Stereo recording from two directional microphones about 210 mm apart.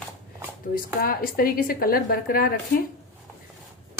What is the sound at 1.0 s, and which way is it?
A woman's voice, 45° left (ahead or behind).